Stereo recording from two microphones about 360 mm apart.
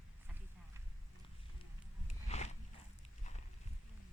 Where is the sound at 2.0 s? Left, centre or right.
Centre.